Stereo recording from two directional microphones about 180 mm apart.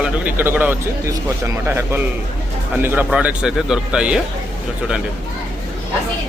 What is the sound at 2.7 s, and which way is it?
Speech, 10° right (ahead or behind).